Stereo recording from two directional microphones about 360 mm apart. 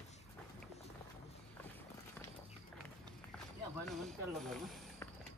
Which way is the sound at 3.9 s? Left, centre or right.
Centre.